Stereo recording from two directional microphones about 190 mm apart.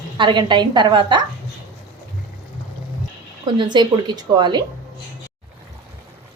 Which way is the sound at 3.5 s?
25° right (ahead or behind).